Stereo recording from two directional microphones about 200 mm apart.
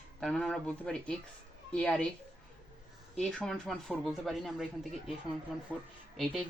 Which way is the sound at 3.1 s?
Centre (ahead or behind).